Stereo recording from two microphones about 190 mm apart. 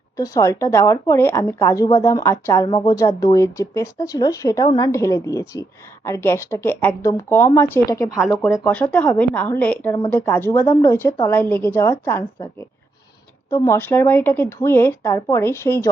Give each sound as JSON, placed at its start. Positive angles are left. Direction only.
{"t": 0.2, "sound": "speech", "side_deg": 15}